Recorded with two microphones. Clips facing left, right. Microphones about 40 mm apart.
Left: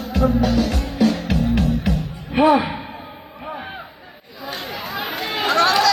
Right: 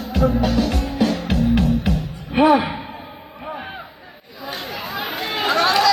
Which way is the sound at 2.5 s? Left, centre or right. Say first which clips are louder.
Right 1 dB; centre.